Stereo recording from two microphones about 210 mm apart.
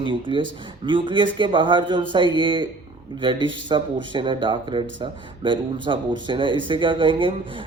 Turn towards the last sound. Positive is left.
turn(degrees=-25)  # may be behind; listen again after turning